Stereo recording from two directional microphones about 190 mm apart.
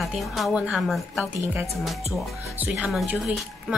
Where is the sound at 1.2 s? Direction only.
10° right (ahead or behind).